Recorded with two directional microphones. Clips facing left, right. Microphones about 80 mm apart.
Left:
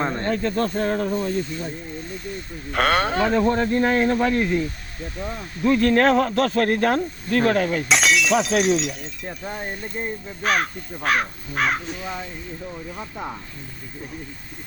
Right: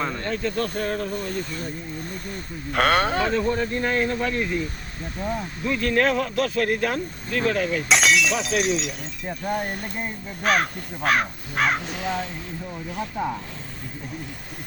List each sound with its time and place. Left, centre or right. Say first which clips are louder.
0.0 s speech: left 3 dB; left
2.7 s speech: even; centre
3.4 s speech: left 4 dB; left
5.6 s speech: left 5 dB; left
7.9 s speech: right 2 dB; centre
11.9 s speech: right 3 dB; right